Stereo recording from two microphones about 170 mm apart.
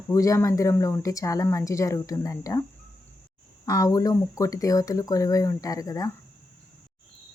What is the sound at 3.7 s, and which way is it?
A woman's voice, 20° left (ahead or behind).